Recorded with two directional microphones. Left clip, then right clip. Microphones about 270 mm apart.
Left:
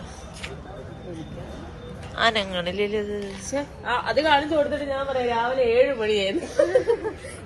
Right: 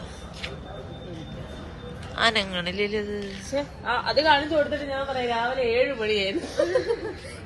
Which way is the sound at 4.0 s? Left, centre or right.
Centre.